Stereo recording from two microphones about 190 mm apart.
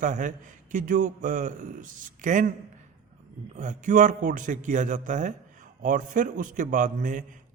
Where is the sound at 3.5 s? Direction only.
40° right (ahead or behind).